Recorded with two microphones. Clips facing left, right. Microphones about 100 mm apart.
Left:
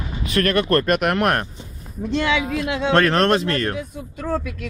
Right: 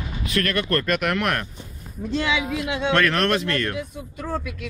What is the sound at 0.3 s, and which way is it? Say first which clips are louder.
Speech: left 5 dB; 35° left (ahead or behind).